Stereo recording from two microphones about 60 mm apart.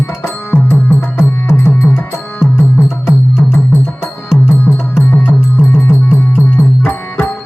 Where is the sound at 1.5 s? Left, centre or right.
Left.